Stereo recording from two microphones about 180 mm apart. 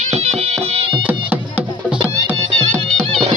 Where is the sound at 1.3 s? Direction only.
10° right (ahead or behind).